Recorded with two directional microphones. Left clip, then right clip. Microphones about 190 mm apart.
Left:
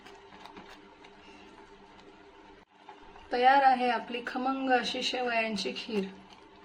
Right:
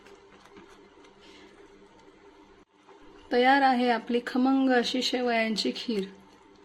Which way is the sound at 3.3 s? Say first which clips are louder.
Right 1 dB; 45° right (ahead or behind).